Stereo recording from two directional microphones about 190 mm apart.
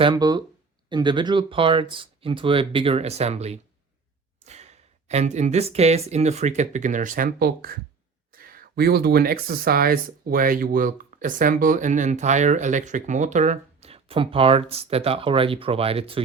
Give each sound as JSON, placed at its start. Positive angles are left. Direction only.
{"t": 0.0, "sound": "speech", "side_deg": -20}